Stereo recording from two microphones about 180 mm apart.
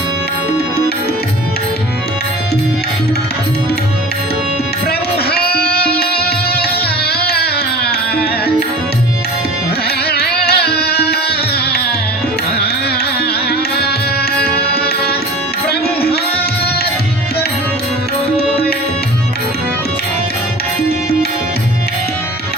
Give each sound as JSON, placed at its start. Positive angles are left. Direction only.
{"t": 4.9, "sound": "music", "side_deg": 60}
{"t": 10.1, "sound": "music", "side_deg": 60}
{"t": 13.5, "sound": "music", "side_deg": 60}